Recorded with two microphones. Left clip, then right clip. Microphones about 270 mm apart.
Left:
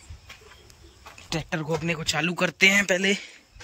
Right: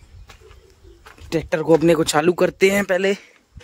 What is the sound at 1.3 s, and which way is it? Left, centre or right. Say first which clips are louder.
Speech: right 12 dB; right.